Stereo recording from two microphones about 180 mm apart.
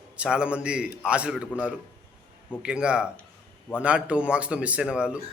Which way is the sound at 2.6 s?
5° right (ahead or behind).